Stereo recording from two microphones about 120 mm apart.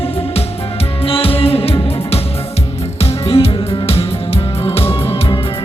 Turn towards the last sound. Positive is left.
turn(degrees=45)  # may be behind; listen again after turning